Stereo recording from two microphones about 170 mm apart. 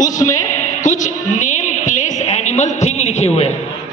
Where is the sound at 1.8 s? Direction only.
45° left (ahead or behind).